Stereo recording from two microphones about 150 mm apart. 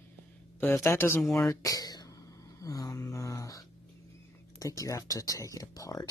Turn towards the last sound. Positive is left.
turn(degrees=25)  # may be behind; listen again after turning